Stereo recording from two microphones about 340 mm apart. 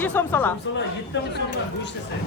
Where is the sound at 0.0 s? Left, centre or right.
Centre.